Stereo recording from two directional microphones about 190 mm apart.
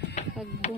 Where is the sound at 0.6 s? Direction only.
35° left (ahead or behind).